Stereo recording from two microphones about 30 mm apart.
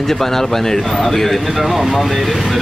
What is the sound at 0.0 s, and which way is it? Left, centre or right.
Speech, centre.